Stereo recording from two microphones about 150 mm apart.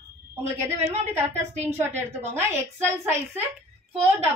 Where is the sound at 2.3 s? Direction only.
15° right (ahead or behind).